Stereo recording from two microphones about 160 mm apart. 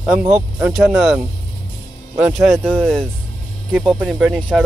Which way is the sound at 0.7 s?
Centre (ahead or behind).